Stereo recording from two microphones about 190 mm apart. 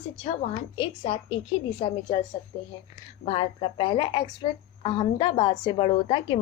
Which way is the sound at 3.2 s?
30° left (ahead or behind).